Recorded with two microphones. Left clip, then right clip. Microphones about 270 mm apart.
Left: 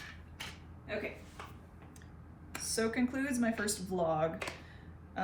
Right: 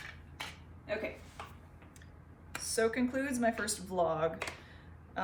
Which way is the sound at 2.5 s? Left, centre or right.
Centre.